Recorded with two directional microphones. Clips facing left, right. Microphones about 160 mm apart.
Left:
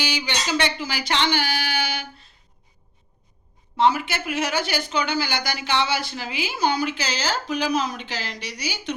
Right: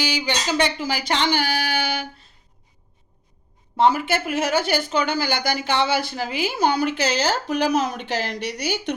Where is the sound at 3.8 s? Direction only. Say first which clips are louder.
Right 2 dB; 50° right (ahead or behind).